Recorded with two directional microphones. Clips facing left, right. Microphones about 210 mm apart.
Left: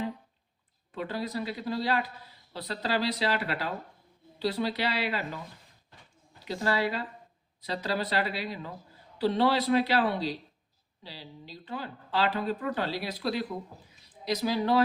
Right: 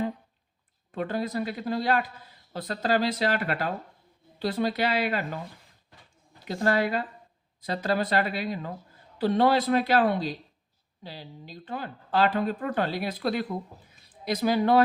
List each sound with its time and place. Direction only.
0.9 s speech: 50° right (ahead or behind)
6.4 s speech: 50° right (ahead or behind)